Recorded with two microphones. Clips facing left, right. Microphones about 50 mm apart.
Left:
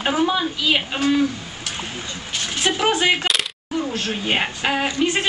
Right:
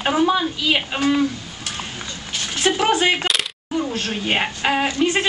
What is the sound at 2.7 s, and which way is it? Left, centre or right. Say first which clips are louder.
Speech: right 3 dB; centre.